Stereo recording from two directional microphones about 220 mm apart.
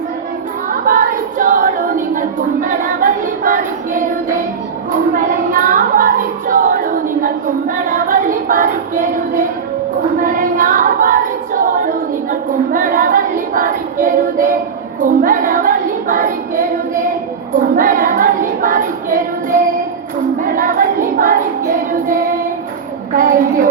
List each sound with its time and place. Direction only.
0.7 s a sound: 40° right (ahead or behind)
2.6 s music: 40° right (ahead or behind)
5.1 s child singing: 40° right (ahead or behind)
10.2 s a capella: 40° right (ahead or behind)
15.0 s female singing: 40° right (ahead or behind)
17.7 s music: 40° right (ahead or behind)
20.4 s a sound: 40° right (ahead or behind)
22.0 s child singing: 40° right (ahead or behind)
23.1 s music: 40° right (ahead or behind)